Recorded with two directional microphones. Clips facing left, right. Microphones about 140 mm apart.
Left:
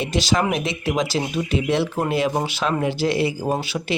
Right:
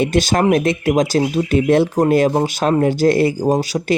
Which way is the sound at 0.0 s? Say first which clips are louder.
Right 6 dB; 50° right (ahead or behind).